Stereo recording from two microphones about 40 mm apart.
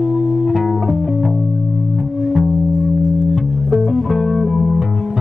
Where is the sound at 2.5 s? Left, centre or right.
Right.